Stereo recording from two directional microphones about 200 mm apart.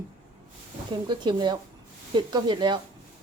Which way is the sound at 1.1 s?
20° right (ahead or behind).